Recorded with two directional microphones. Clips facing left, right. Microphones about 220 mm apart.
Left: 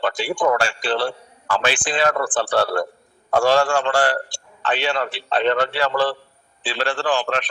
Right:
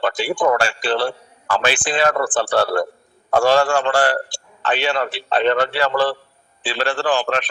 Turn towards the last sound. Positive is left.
turn(degrees=-5)  # may be behind; listen again after turning